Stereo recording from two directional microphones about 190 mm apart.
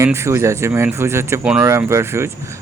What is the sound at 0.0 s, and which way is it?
Speech, 15° right (ahead or behind).